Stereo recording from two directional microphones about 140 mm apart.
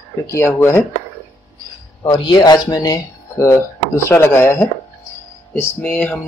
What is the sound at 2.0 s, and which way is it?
Speech, 30° left (ahead or behind).